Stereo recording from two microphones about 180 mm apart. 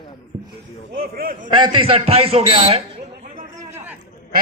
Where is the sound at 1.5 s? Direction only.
25° right (ahead or behind).